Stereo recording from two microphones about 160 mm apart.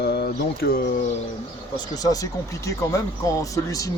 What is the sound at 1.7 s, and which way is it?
Speech, 25° left (ahead or behind).